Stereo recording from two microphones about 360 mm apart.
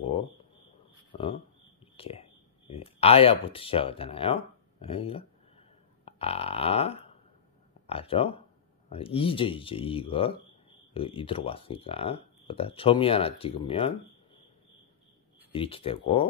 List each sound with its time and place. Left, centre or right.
1.1 s speech: centre
6.0 s burping: centre
7.8 s speech: centre
15.5 s speech: centre